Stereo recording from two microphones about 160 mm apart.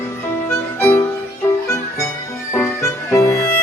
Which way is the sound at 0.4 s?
15° left (ahead or behind).